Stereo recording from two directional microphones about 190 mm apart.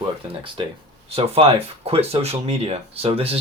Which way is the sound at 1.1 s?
30° right (ahead or behind).